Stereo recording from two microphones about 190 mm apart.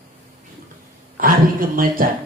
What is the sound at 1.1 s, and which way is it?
Speech, 50° right (ahead or behind).